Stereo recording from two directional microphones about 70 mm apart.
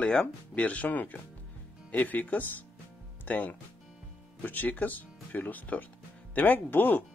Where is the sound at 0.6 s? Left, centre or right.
Left.